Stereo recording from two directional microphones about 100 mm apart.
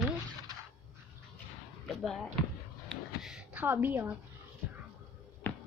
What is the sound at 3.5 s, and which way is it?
Speech, 20° right (ahead or behind).